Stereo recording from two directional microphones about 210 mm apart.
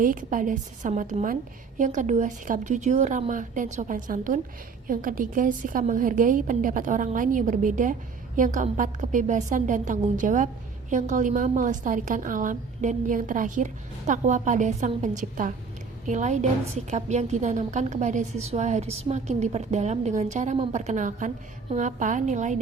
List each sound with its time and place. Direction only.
0.0 s a woman's voice: 40° right (ahead or behind)